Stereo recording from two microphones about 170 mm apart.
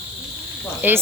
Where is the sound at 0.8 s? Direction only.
10° right (ahead or behind).